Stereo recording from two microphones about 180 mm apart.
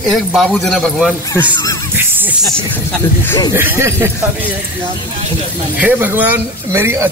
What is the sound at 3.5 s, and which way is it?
Speech, 10° right (ahead or behind).